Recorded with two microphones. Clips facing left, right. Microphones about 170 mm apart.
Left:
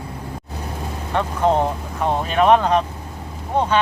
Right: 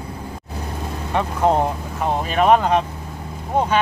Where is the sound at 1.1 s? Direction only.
10° right (ahead or behind).